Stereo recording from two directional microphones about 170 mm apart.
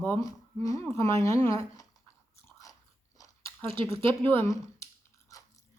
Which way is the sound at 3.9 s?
15° left (ahead or behind).